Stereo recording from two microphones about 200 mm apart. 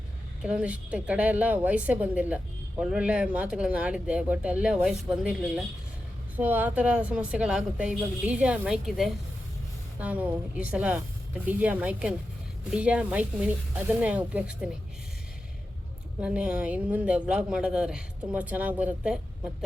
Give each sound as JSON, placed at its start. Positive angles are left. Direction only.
{"t": 0.4, "sound": "a woman's voice", "side_deg": -5}
{"t": 16.2, "sound": "a woman's voice", "side_deg": -5}